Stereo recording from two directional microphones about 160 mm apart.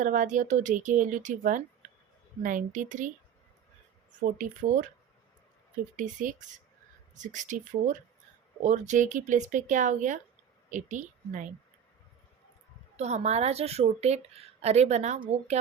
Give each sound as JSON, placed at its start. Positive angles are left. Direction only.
{"t": 0.0, "sound": "a woman's voice", "side_deg": -55}
{"t": 4.4, "sound": "speech", "side_deg": -55}
{"t": 6.0, "sound": "a woman's voice", "side_deg": -55}
{"t": 13.0, "sound": "a woman's voice", "side_deg": -45}